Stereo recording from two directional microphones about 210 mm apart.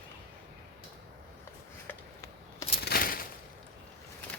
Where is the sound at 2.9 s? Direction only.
45° left (ahead or behind).